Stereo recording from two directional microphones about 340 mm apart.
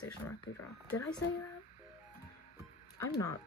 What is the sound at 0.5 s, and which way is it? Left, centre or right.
Speech, left.